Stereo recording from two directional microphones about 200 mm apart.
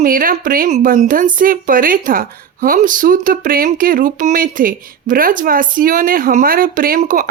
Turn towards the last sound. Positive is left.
turn(degrees=-45)  # may be behind; listen again after turning